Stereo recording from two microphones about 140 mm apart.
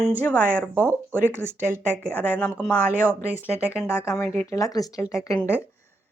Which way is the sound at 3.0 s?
10° right (ahead or behind).